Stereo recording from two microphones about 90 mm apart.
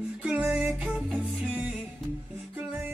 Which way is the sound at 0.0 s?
10° right (ahead or behind).